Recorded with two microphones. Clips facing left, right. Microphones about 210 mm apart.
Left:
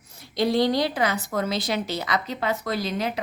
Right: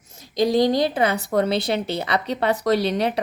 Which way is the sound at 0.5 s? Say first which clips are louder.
Right 4 dB; 45° right (ahead or behind).